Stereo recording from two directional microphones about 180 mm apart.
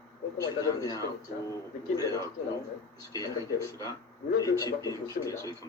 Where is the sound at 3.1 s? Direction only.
20° left (ahead or behind).